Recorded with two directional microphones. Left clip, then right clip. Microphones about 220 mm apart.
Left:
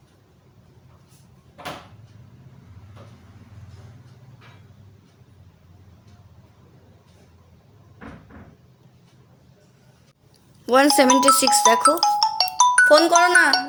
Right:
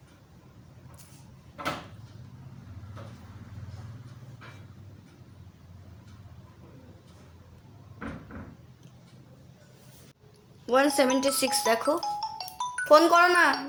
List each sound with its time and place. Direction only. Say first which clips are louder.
10.7 s speech: left 8 dB; 35° left (ahead or behind)
11.9 s music: left 13 dB; 40° left (ahead or behind)
12.8 s speech: left 3 dB; 20° left (ahead or behind)